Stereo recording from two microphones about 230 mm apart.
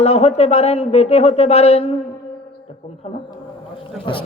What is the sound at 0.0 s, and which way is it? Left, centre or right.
Speech, left.